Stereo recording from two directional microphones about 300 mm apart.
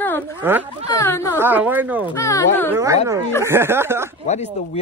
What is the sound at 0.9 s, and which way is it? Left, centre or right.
Speech, centre.